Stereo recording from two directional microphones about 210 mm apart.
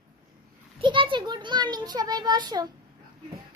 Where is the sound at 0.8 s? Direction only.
25° right (ahead or behind).